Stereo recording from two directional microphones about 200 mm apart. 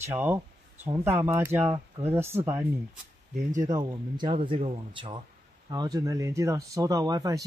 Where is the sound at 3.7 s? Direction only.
20° right (ahead or behind).